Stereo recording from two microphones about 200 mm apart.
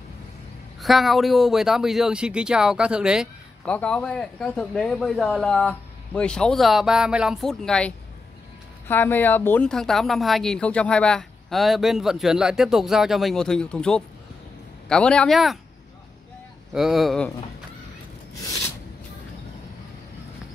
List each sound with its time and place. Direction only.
0.7 s a woman's voice: centre (ahead or behind)
16.7 s a woman's voice: centre (ahead or behind)
18.4 s a sound: 15° left (ahead or behind)